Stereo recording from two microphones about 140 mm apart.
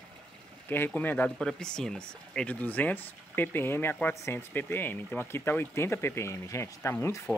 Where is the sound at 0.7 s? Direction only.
15° left (ahead or behind).